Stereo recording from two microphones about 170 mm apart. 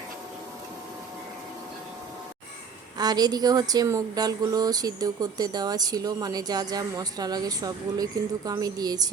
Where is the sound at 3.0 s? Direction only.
25° right (ahead or behind).